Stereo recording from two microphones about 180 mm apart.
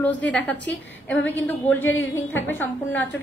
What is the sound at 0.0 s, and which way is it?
A woman's voice, 10° left (ahead or behind).